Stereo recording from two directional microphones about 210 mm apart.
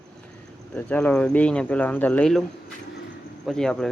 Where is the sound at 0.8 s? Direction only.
10° left (ahead or behind).